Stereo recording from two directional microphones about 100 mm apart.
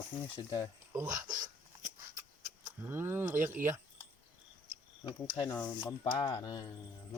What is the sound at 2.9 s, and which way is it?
Speech, 25° right (ahead or behind).